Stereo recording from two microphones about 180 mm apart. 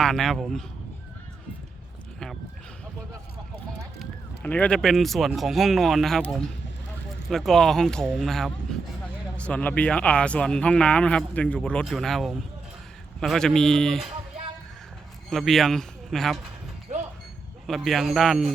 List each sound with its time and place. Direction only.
0.0 s speech: centre (ahead or behind)
4.0 s speech: 10° left (ahead or behind)
15.3 s speech: centre (ahead or behind)
16.9 s a sound: 40° right (ahead or behind)
17.7 s speech: centre (ahead or behind)